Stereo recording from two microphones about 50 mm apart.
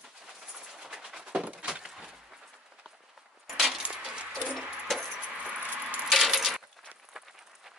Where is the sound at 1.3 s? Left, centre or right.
Right.